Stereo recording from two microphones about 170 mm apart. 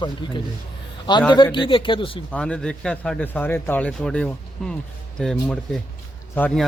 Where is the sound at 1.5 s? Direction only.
30° left (ahead or behind).